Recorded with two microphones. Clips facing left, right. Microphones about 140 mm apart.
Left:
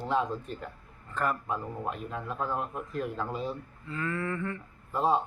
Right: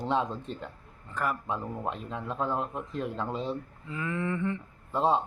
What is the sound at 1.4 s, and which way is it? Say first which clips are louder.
Speech: right 1 dB; 25° right (ahead or behind).